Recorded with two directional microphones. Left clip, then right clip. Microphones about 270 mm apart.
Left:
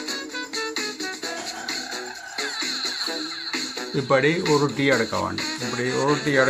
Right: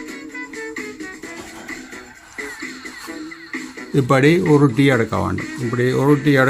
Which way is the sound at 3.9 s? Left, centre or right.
Right.